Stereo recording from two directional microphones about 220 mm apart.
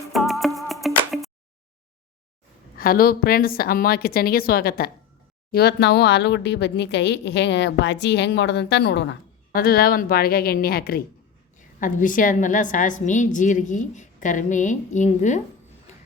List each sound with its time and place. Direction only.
0.1 s music: centre (ahead or behind)
2.7 s a woman's voice: 40° left (ahead or behind)